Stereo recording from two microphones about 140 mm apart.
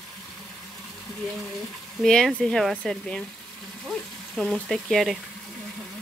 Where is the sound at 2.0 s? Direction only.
5° left (ahead or behind).